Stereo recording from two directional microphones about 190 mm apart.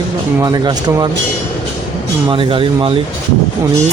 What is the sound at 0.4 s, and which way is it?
Speech, 20° right (ahead or behind).